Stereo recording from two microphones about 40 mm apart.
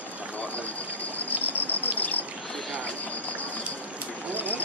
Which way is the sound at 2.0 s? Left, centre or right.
Left.